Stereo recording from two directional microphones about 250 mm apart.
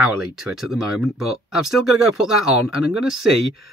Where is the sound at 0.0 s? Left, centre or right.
Centre.